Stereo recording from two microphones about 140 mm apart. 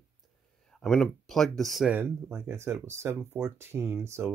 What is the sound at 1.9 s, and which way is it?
Speech, 15° right (ahead or behind).